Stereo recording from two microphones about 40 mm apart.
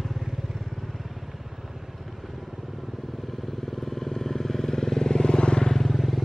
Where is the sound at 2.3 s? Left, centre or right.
Centre; by 5.7 s left.